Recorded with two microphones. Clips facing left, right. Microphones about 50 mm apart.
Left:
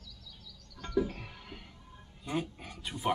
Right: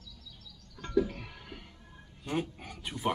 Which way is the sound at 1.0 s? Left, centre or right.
Centre.